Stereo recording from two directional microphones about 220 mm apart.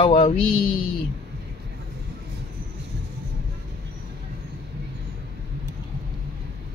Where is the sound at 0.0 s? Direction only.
25° left (ahead or behind).